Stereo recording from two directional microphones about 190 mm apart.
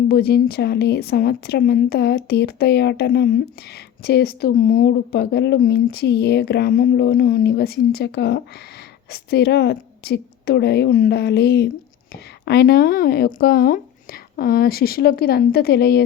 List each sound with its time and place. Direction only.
0.1 s a woman's voice: 55° left (ahead or behind)